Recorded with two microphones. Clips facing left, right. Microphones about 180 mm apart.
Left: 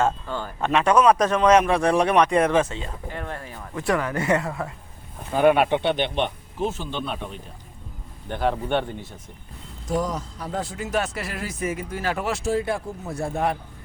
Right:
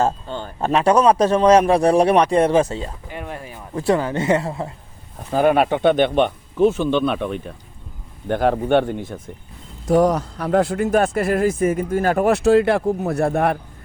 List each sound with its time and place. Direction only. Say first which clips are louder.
0.0 s a man's voice: right 3 dB; 25° right (ahead or behind)
3.1 s a sound: right 2 dB; 15° right (ahead or behind)
3.8 s speech: right 5 dB; 30° right (ahead or behind)
5.3 s speech: right 2 dB; 40° right (ahead or behind); by 7.4 s 65° right (ahead or behind)
8.3 s speech: right 7 dB; 50° right (ahead or behind)
9.8 s speech: right 10 dB; 65° right (ahead or behind)